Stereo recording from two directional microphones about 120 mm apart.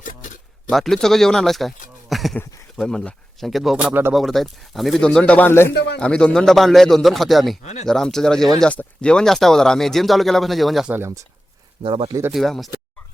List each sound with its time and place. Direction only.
0.7 s speech: centre (ahead or behind); by 5.7 s 20° left (ahead or behind)
6.0 s speech: 10° left (ahead or behind)
7.6 s speech: 70° left (ahead or behind)
7.9 s speech: 5° left (ahead or behind)
10.9 s speech: 25° right (ahead or behind)
11.8 s speech: 45° right (ahead or behind)
12.3 s speech: centre (ahead or behind)